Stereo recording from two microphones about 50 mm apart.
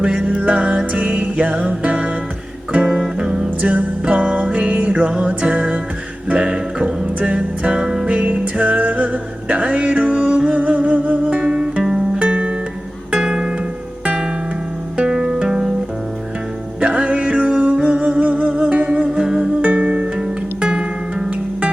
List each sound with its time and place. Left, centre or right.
0.0 s music: centre
3.2 s music: centre
3.6 s music: right
8.1 s music: right
11.3 s music: centre
12.2 s music: right
14.9 s music: centre
16.8 s music: right
19.6 s music: right
20.1 s music: centre